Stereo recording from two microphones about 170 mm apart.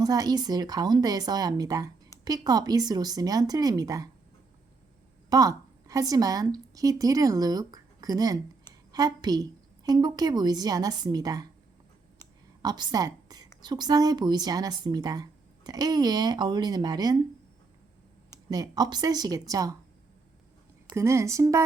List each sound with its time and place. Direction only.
0.0 s speech: 25° right (ahead or behind)
5.3 s a woman's voice: 20° right (ahead or behind)
12.6 s a woman's voice: 25° right (ahead or behind)
18.5 s speech: 25° right (ahead or behind)
20.9 s speech: 15° right (ahead or behind)